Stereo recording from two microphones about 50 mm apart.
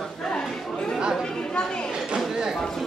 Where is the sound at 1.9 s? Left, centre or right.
Centre.